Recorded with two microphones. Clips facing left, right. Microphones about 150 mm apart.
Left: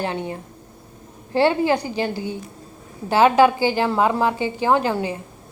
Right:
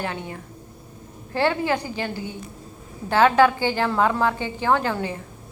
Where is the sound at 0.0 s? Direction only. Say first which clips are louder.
Left 4 dB; 25° left (ahead or behind).